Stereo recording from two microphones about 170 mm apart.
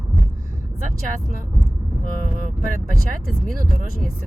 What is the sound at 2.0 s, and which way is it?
Speech, 55° right (ahead or behind).